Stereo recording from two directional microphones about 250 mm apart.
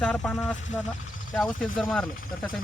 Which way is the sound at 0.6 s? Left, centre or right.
Left.